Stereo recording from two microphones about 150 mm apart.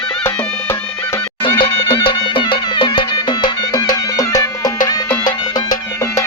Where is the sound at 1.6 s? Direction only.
35° left (ahead or behind).